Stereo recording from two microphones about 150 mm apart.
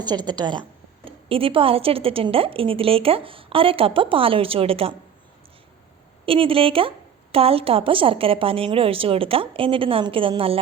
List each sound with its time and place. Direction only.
0.0 s a woman's voice: 30° right (ahead or behind)
6.2 s a woman's voice: 35° right (ahead or behind)